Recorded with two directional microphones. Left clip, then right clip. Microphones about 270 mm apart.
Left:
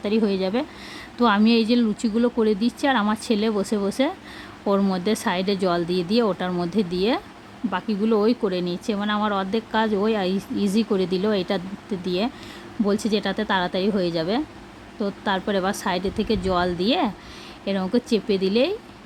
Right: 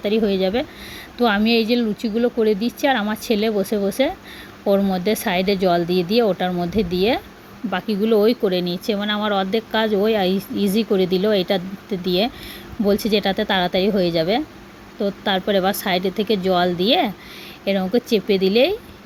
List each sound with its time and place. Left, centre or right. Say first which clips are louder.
0.0 s speech: right 4 dB; centre